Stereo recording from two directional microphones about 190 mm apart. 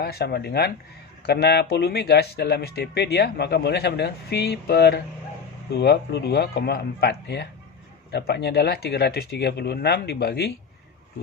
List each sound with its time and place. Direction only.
0.0 s speech: 55° left (ahead or behind)